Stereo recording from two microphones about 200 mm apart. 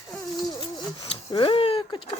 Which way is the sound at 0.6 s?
25° left (ahead or behind).